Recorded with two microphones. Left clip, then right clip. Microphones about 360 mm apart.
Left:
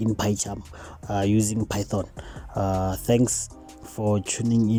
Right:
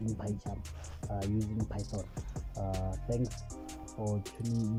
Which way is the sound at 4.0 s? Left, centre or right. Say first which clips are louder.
Left 13 dB; left.